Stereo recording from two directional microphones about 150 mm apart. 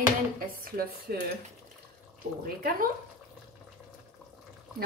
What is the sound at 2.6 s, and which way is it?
Speech, 70° right (ahead or behind).